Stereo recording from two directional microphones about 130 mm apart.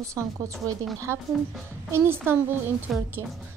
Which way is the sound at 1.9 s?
15° right (ahead or behind).